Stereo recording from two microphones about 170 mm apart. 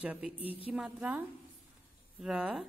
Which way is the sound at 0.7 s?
5° right (ahead or behind).